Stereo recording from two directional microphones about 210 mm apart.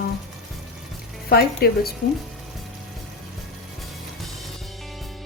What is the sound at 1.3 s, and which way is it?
Speech, 45° left (ahead or behind).